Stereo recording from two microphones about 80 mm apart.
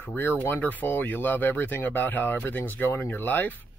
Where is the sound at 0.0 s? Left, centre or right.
Left.